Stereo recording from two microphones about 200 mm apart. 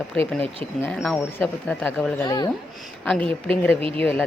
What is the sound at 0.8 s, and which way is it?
Speech, centre (ahead or behind).